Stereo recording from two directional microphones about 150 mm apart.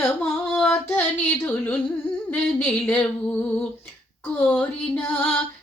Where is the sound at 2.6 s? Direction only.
5° left (ahead or behind).